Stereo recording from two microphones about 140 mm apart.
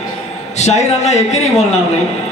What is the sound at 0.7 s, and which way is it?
Speech, 55° left (ahead or behind).